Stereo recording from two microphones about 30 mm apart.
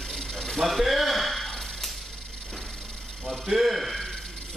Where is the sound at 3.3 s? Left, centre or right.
Centre.